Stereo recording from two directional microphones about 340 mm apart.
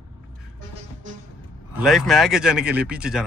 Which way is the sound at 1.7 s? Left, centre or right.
Centre.